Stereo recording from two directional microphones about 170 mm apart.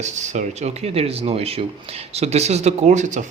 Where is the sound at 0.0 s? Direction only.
45° right (ahead or behind).